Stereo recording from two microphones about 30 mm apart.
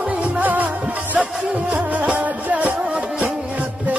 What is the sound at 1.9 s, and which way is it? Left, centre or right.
Music, right.